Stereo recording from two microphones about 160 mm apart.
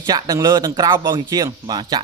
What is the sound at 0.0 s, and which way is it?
Speech, 25° right (ahead or behind).